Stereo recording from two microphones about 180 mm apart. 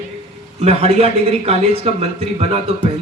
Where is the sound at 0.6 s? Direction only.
35° right (ahead or behind).